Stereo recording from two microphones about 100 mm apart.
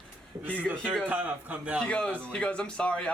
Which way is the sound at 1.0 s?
15° right (ahead or behind).